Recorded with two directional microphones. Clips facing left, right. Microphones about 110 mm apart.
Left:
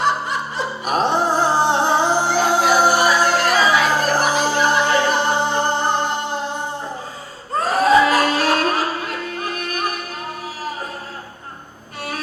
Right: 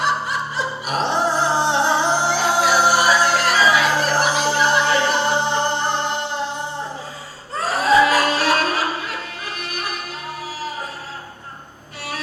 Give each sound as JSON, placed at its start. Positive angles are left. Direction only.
{"t": 0.9, "sound": "music", "side_deg": 45}
{"t": 7.5, "sound": "music", "side_deg": 50}